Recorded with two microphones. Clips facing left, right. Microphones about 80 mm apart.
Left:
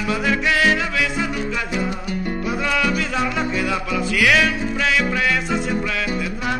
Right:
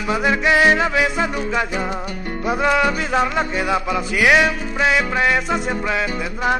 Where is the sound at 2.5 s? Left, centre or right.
Right.